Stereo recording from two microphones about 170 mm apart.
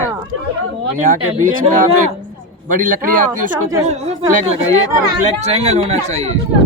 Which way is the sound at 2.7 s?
55° right (ahead or behind).